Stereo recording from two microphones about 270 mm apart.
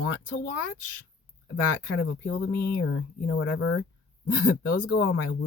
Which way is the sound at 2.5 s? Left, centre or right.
Left.